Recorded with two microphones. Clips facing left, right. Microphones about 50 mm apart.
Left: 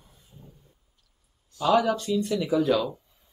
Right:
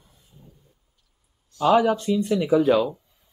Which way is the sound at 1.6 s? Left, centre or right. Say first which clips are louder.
Right 4 dB; centre.